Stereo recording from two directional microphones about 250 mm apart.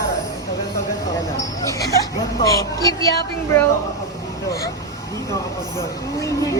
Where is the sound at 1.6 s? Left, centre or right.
Centre.